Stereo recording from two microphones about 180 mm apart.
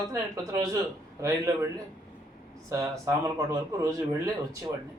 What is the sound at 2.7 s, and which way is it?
Speech, 15° right (ahead or behind).